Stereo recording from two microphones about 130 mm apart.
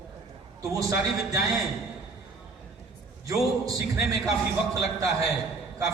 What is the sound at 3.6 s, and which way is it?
Speech, 25° right (ahead or behind).